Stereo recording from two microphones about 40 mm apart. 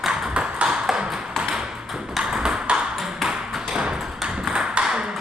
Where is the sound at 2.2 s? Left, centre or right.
Centre.